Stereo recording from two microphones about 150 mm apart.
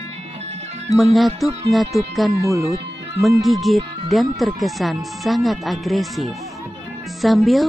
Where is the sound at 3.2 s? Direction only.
Centre (ahead or behind).